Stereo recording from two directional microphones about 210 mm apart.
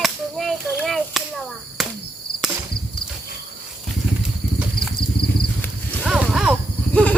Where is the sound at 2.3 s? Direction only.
45° left (ahead or behind).